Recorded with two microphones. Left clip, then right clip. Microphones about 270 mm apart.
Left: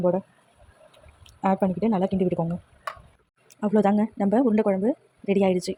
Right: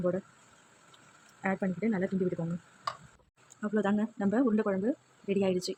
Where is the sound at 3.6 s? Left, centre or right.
Centre.